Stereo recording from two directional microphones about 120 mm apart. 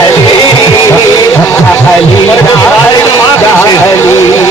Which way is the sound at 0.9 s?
20° left (ahead or behind).